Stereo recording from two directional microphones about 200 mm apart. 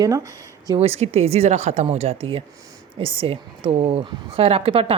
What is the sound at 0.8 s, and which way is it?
A woman's voice, 30° right (ahead or behind).